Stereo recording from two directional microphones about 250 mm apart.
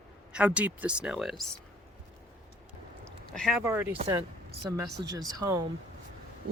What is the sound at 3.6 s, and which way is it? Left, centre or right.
Speech, centre.